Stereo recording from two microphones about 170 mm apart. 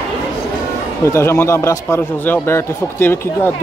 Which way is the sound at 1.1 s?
15° left (ahead or behind).